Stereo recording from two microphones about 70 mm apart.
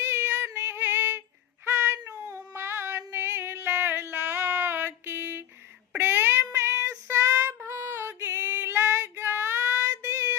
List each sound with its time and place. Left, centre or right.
0.0 s female singing: right
1.6 s child singing: right
3.1 s a sound: right
6.0 s child singing: right